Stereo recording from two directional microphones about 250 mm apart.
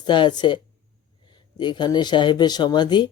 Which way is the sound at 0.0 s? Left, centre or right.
Centre.